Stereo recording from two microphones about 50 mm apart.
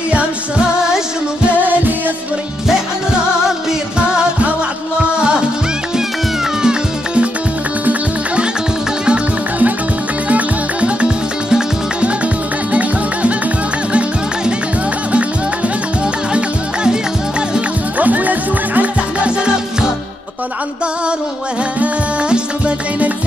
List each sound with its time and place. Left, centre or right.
1.6 s music: right
6.6 s cat: centre
10.2 s music: right
17.9 s music: right
22.3 s music: right